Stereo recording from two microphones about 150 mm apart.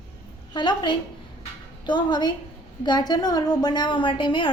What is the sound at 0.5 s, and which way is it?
A woman's voice, 30° left (ahead or behind).